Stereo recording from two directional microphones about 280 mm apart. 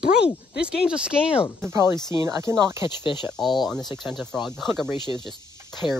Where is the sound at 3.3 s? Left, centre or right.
Centre.